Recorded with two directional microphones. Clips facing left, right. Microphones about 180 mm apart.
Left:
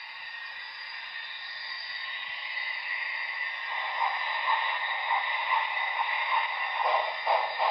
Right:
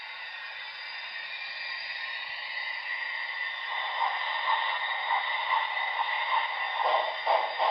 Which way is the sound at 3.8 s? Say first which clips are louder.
Even; 25° right (ahead or behind).